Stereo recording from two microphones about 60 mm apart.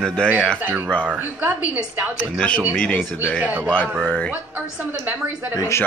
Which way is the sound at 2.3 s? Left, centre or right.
Centre.